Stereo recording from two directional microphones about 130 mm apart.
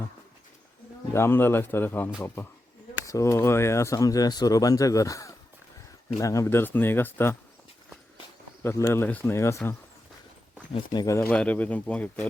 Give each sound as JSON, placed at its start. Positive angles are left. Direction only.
{"t": 1.1, "sound": "speech", "side_deg": 20}
{"t": 8.6, "sound": "speech", "side_deg": 20}
{"t": 10.9, "sound": "speech", "side_deg": 25}
{"t": 11.3, "sound": "speech", "side_deg": 10}